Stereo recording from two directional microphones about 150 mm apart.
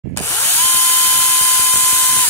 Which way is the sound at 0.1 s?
15° left (ahead or behind).